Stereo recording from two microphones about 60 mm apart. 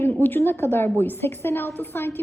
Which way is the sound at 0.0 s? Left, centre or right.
Left.